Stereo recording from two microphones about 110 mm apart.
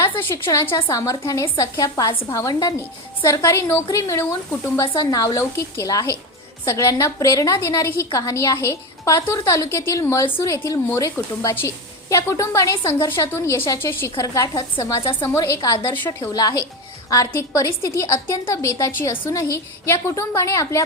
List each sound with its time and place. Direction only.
0.0 s a woman's voice: 20° left (ahead or behind)
4.9 s a woman's voice: 35° left (ahead or behind)